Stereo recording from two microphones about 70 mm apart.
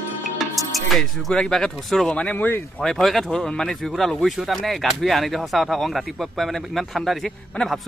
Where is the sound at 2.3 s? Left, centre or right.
Left.